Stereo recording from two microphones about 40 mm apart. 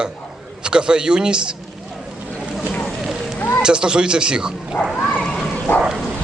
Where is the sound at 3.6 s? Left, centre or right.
Centre.